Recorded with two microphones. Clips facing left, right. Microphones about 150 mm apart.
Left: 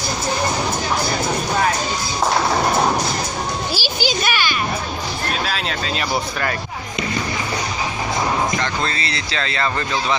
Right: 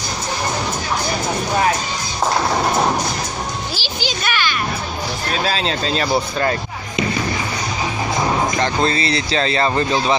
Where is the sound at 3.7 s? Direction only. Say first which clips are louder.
Left 3 dB; 5° left (ahead or behind).